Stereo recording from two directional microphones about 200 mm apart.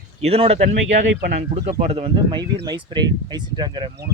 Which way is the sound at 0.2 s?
30° right (ahead or behind).